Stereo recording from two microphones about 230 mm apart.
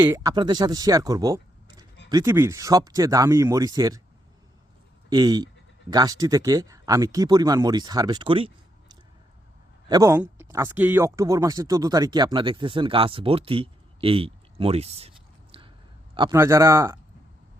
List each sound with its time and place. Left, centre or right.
0.0 s speech: centre
5.0 s speech: centre
15.5 s chewing: right
16.1 s speech: centre